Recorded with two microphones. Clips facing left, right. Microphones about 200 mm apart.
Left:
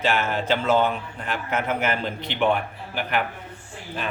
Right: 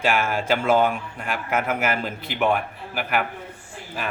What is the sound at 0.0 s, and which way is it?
A man's voice, 10° right (ahead or behind).